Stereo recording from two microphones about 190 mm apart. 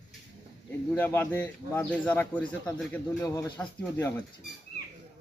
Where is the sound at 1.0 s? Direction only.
10° left (ahead or behind).